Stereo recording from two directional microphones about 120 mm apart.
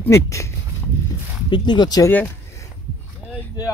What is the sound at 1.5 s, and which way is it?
Speech, 40° left (ahead or behind).